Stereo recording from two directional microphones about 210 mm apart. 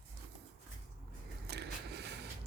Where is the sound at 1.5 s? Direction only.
55° right (ahead or behind).